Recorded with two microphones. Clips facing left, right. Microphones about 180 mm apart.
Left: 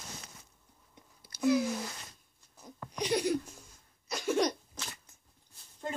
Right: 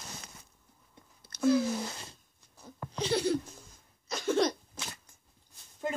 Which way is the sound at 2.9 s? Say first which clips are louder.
Right 1 dB; 15° left (ahead or behind).